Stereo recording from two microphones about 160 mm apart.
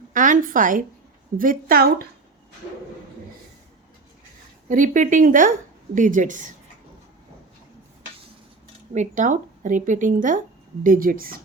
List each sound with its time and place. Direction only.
0.1 s a woman's voice: 55° right (ahead or behind)
4.7 s a woman's voice: 55° right (ahead or behind)
9.0 s a woman's voice: 50° right (ahead or behind)